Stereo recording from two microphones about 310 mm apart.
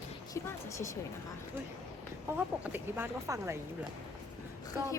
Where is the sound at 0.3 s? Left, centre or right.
Centre.